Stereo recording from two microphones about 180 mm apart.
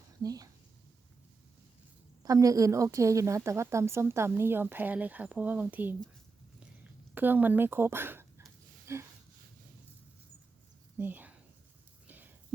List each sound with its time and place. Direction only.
0.2 s speech: 20° right (ahead or behind)
2.2 s a woman's voice: 20° right (ahead or behind)
7.1 s a woman's voice: 10° right (ahead or behind)
10.9 s a sound: 10° right (ahead or behind)